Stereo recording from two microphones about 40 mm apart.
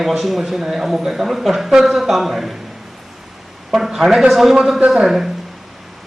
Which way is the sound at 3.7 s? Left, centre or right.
Centre.